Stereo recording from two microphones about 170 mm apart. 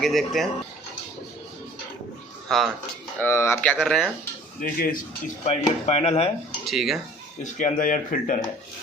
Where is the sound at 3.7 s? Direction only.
Centre (ahead or behind).